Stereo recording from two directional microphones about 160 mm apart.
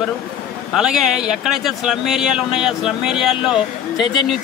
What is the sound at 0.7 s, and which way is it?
A man's voice, centre (ahead or behind).